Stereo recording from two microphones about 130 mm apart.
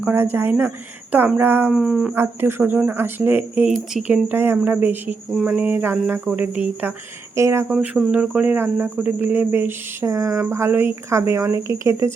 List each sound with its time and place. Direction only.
0.0 s speech: 15° right (ahead or behind)
1.7 s speech: 5° right (ahead or behind)
2.1 s speech: 20° right (ahead or behind)
7.7 s speech: 5° right (ahead or behind); by 12.1 s 20° right (ahead or behind)